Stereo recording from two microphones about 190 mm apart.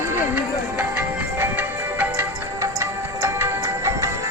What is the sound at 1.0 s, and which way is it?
Music, 10° right (ahead or behind).